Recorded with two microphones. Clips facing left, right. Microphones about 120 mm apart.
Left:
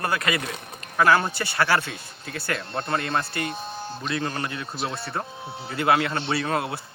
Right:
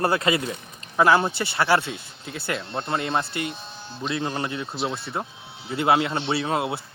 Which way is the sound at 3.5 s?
45° left (ahead or behind).